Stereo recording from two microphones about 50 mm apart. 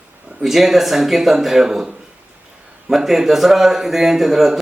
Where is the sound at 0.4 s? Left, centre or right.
Centre.